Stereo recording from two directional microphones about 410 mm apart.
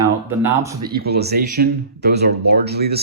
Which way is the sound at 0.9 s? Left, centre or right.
Right.